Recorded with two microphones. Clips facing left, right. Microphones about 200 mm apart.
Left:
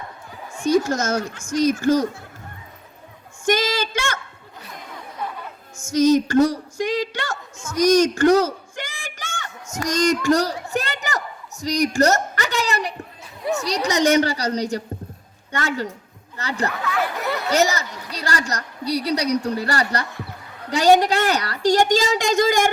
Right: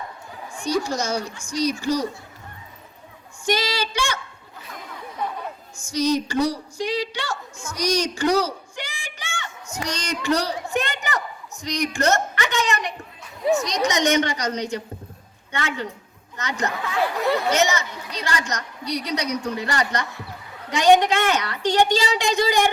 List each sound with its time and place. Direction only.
0.6 s speech: 50° left (ahead or behind)
3.4 s speech: 50° left (ahead or behind)
5.9 s speech: 50° left (ahead or behind)
7.8 s a sound: 50° left (ahead or behind)
11.6 s a woman's voice: 40° left (ahead or behind)
16.8 s speech: 30° right (ahead or behind)
17.5 s a woman's voice: 35° left (ahead or behind)